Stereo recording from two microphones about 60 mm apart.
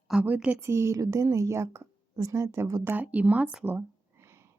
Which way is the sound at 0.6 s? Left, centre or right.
Right.